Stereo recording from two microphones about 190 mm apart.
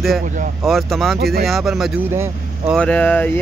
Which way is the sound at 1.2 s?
55° right (ahead or behind).